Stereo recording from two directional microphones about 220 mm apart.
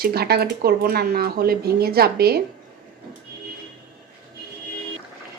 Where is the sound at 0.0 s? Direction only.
45° right (ahead or behind).